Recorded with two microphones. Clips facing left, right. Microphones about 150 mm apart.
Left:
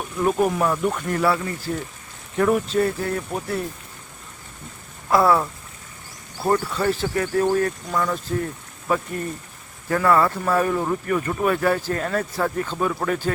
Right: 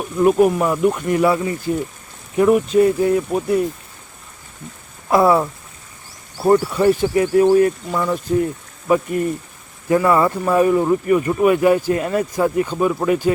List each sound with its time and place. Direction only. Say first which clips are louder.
0.2 s speech: right 6 dB; 5° right (ahead or behind)
5.0 s speech: right 4 dB; 20° right (ahead or behind)